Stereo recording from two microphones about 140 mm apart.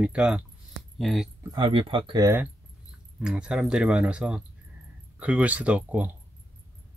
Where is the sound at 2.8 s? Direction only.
5° right (ahead or behind).